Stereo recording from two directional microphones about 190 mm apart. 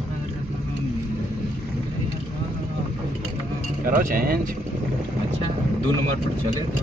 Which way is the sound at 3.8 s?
45° right (ahead or behind).